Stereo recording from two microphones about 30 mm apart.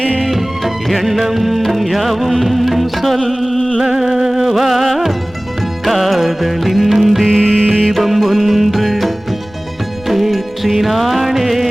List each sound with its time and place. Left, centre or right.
0.2 s music: centre
3.8 s music: centre
7.3 s music: centre
7.9 s music: centre